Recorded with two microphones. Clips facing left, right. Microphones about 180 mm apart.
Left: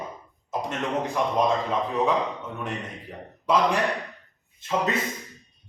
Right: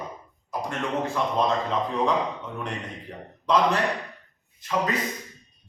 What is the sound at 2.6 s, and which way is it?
A man's voice, 5° left (ahead or behind).